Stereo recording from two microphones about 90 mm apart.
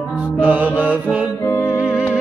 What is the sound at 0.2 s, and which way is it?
Music, 15° right (ahead or behind).